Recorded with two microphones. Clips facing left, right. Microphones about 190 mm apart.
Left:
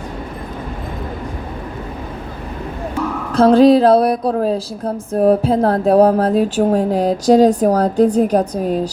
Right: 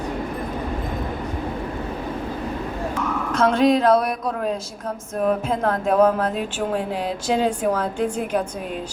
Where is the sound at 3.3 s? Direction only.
35° left (ahead or behind).